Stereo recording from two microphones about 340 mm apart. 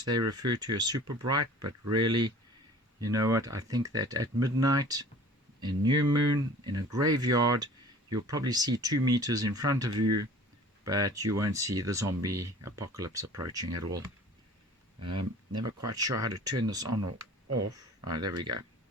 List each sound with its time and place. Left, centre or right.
0.0 s speech: centre
10.0 s speech: right
10.8 s speech: centre
17.5 s speech: right
18.0 s speech: centre